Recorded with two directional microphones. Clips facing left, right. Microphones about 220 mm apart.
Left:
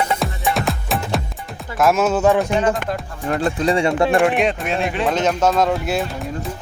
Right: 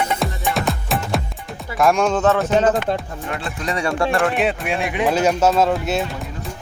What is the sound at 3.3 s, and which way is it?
Speech, 40° left (ahead or behind).